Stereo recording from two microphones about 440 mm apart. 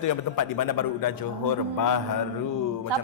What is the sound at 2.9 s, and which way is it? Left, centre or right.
Speech, right.